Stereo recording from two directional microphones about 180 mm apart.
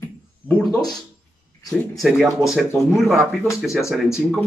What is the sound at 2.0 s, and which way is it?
Speech, centre (ahead or behind).